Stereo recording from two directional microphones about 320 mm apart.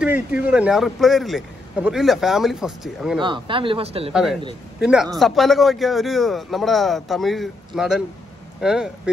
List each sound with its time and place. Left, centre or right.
0.0 s speech: centre
3.2 s speech: centre
4.1 s speech: centre